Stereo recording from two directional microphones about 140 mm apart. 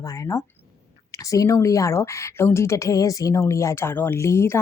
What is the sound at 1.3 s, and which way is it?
Speech, 20° left (ahead or behind).